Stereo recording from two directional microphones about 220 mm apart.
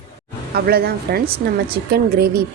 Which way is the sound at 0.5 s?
45° right (ahead or behind).